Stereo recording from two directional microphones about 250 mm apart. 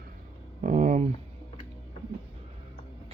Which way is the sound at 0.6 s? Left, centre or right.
Right.